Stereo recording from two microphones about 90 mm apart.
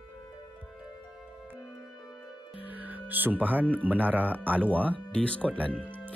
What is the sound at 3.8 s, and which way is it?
Speech, 20° right (ahead or behind).